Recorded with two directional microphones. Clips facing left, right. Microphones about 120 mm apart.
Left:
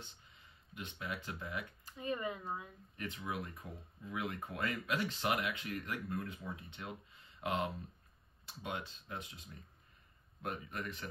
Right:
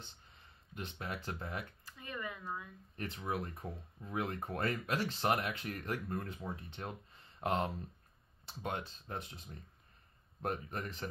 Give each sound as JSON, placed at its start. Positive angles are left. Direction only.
{"t": 0.0, "sound": "speech", "side_deg": -35}
{"t": 1.9, "sound": "speech", "side_deg": 25}
{"t": 3.0, "sound": "speech", "side_deg": -40}